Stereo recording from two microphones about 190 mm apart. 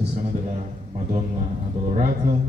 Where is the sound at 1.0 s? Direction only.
35° right (ahead or behind).